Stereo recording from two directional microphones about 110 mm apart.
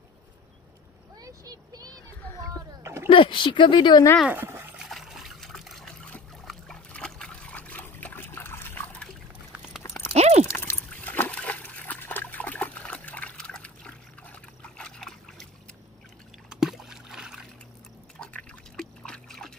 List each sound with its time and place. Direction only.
1.2 s vehicle: 35° right (ahead or behind)
2.8 s a sound: 25° right (ahead or behind)
3.1 s a woman's voice: 50° left (ahead or behind)
4.3 s dog: 20° right (ahead or behind)
4.7 s trickle: 5° right (ahead or behind)
9.8 s a sound: 25° left (ahead or behind)
10.1 s horse: 85° right
10.5 s trickle: 25° left (ahead or behind)
10.9 s water: 15° left (ahead or behind)
16.4 s a sound: 5° right (ahead or behind)
18.2 s liquid: 10° left (ahead or behind)